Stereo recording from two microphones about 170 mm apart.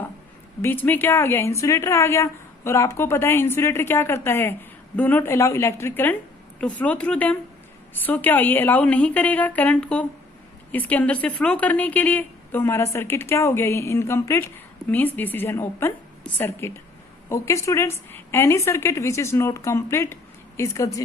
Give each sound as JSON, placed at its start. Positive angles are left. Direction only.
{"t": 0.6, "sound": "a woman's voice", "side_deg": 10}